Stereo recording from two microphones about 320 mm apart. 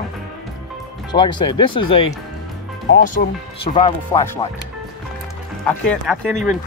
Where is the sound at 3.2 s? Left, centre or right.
Left.